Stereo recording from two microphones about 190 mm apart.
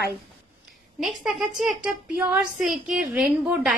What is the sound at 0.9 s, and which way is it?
A woman's voice, centre (ahead or behind).